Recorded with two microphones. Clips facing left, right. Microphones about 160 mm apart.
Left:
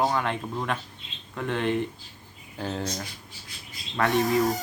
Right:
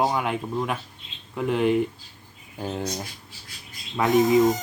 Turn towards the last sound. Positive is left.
turn(degrees=-20)  # may be behind; listen again after turning